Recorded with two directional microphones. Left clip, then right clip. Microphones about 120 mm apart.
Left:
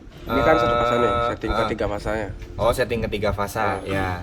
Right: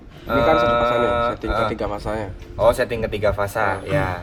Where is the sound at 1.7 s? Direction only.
5° right (ahead or behind).